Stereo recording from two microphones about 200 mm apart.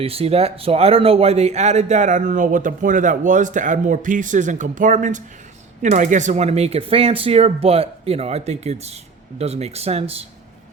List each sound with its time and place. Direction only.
0.0 s speech: 30° right (ahead or behind)